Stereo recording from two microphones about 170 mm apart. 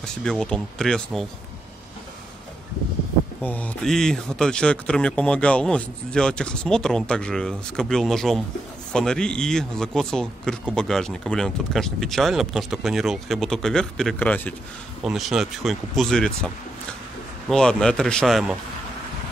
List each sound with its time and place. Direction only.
0.0 s speech: 5° left (ahead or behind)
3.4 s speech: 10° left (ahead or behind)
15.0 s speech: centre (ahead or behind)
17.5 s speech: 5° left (ahead or behind)